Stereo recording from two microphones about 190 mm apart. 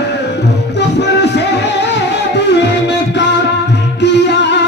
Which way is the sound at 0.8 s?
65° left (ahead or behind).